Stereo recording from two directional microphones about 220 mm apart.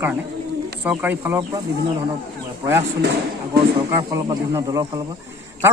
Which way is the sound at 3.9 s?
15° right (ahead or behind).